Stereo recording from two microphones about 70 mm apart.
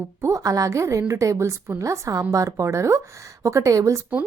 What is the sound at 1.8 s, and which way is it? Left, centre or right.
A woman's voice, right.